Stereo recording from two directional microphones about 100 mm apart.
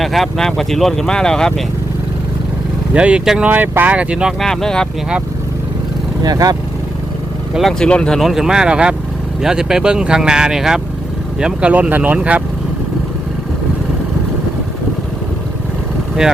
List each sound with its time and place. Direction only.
0.0 s speech: centre (ahead or behind)
2.9 s speech: 10° right (ahead or behind)
4.4 s speech: 5° left (ahead or behind)
6.2 s speech: 40° right (ahead or behind)
7.5 s speech: 5° left (ahead or behind); by 12.4 s 15° right (ahead or behind)